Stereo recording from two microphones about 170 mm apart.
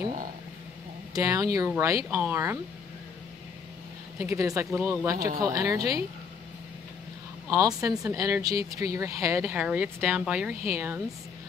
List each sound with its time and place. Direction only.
1.1 s speech: 20° right (ahead or behind)
4.2 s speech: 15° right (ahead or behind)
7.4 s speech: 20° right (ahead or behind)